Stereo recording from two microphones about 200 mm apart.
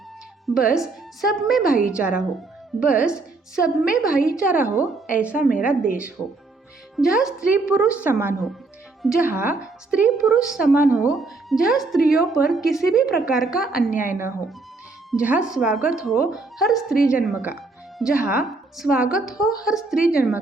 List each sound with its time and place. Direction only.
0.4 s a woman's voice: 5° right (ahead or behind)
6.9 s a woman's voice: centre (ahead or behind)
13.9 s a woman's voice: 40° left (ahead or behind)
15.1 s speech: 5° right (ahead or behind)